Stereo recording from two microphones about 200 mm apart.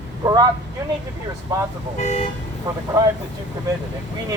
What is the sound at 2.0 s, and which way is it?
Speech, 35° left (ahead or behind).